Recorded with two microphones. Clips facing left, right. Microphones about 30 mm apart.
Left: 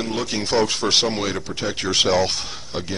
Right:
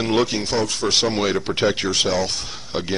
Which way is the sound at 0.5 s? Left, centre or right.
Centre.